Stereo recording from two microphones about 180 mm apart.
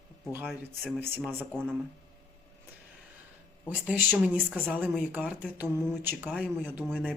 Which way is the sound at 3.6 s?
10° right (ahead or behind).